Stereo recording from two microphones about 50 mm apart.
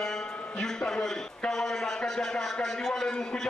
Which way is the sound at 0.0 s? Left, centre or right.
Centre.